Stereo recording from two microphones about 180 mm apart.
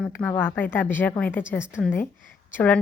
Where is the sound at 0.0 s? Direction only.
10° left (ahead or behind).